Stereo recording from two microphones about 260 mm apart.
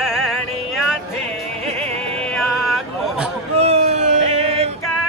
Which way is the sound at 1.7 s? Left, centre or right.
Right.